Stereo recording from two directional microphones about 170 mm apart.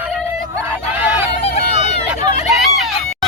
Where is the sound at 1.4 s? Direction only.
35° left (ahead or behind).